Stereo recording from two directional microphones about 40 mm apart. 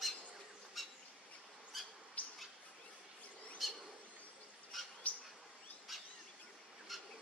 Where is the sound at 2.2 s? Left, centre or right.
Left.